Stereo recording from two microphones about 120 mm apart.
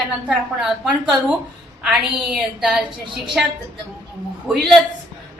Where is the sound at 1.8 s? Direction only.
5° right (ahead or behind).